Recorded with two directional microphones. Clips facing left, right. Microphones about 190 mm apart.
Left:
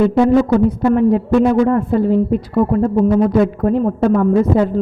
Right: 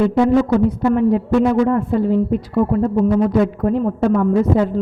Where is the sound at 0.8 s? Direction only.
50° left (ahead or behind).